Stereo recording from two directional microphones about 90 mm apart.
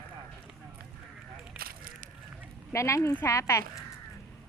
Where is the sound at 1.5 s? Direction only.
15° right (ahead or behind).